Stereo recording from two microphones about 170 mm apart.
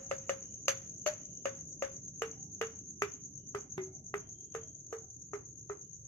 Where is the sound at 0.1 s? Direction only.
10° left (ahead or behind).